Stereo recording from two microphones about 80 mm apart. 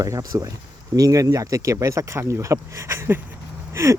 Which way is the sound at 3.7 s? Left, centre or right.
Right.